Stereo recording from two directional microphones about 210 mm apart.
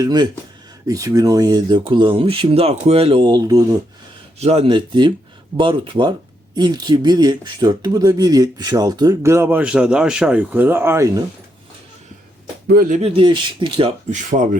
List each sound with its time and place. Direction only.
0.0 s speech: 20° right (ahead or behind)
4.4 s speech: 30° right (ahead or behind); by 11.2 s 15° right (ahead or behind)
12.6 s speech: 45° right (ahead or behind)
13.0 s speech: 25° right (ahead or behind)
14.1 s speech: 35° right (ahead or behind)